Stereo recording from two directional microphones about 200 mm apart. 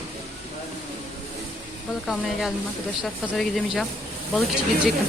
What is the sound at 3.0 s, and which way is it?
Speech, centre (ahead or behind).